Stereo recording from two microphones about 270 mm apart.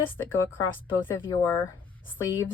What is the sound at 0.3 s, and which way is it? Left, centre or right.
A woman's voice, centre.